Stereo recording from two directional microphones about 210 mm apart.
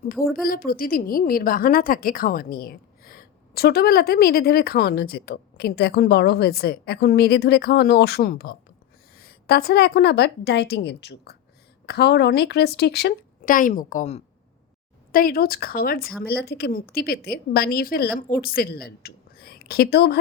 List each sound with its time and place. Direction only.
0.0 s a woman's voice: 45° left (ahead or behind)
15.1 s a woman's voice: 45° left (ahead or behind)